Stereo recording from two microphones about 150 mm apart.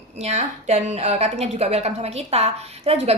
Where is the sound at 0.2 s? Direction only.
50° right (ahead or behind).